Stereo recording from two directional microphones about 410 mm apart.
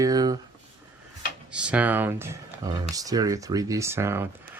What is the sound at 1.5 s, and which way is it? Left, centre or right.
Speech, centre.